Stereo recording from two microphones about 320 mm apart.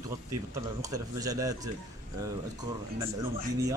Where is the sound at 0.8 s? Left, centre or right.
Centre.